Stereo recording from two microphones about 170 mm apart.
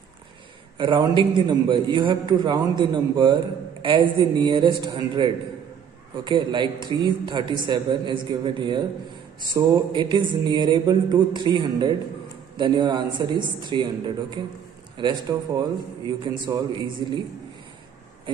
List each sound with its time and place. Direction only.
0.7 s a man's voice: 30° right (ahead or behind)